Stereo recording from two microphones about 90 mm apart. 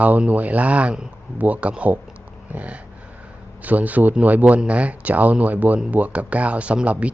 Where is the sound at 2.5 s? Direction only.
15° right (ahead or behind).